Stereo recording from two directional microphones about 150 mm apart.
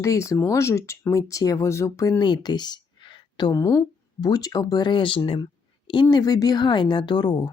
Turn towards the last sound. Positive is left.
turn(degrees=30)  # may be behind; listen again after turning